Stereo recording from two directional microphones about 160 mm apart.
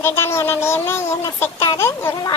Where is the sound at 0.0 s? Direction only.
15° left (ahead or behind).